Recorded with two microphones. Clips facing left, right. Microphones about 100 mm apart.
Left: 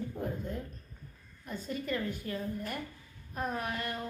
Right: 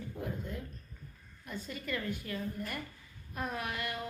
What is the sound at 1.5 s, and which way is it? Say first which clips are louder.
Speech: left 3 dB; 40° left (ahead or behind).